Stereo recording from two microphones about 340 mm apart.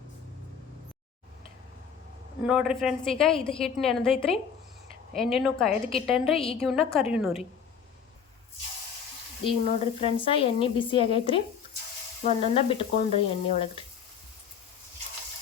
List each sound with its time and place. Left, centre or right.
2.4 s a woman's voice: centre
6.3 s a woman's voice: centre
6.6 s a woman's voice: centre
9.4 s a woman's voice: centre